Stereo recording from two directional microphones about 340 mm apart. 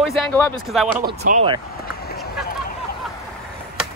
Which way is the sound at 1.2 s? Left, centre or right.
Right.